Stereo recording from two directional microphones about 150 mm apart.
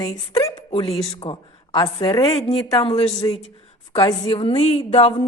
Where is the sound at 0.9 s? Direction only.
40° left (ahead or behind).